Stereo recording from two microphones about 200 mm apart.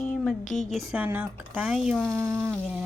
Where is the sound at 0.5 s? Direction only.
Centre (ahead or behind).